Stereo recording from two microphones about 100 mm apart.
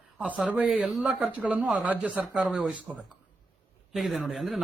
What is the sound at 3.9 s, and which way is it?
Speech, centre (ahead or behind).